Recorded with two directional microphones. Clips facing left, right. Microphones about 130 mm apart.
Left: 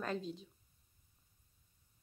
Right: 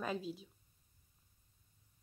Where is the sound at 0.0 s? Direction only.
5° right (ahead or behind).